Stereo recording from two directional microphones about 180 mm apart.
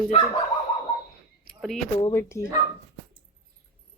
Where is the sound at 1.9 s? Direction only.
15° left (ahead or behind).